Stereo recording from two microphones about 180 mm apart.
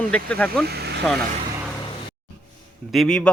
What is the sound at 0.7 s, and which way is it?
Speech, 65° right (ahead or behind).